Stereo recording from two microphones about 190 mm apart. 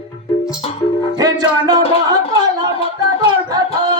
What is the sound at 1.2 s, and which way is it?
Music, 20° right (ahead or behind).